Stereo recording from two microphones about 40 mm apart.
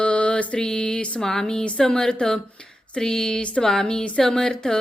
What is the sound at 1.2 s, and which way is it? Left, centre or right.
Speech, centre.